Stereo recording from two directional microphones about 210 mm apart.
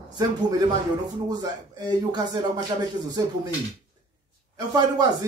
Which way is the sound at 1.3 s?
20° right (ahead or behind).